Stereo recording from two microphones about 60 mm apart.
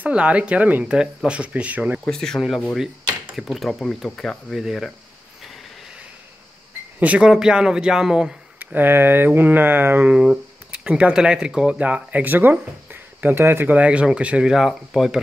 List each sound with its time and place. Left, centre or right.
0.0 s speech: centre
2.0 s speech: centre
7.2 s speech: centre
8.5 s speech: right
10.1 s speech: centre
11.8 s speech: right
13.7 s speech: centre
14.5 s speech: centre